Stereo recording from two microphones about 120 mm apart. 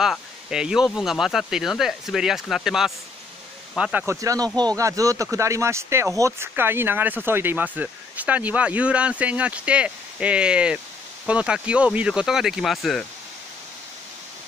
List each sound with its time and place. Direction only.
0.0 s speech: 5° right (ahead or behind)
4.0 s speech: 25° right (ahead or behind); by 13.0 s centre (ahead or behind)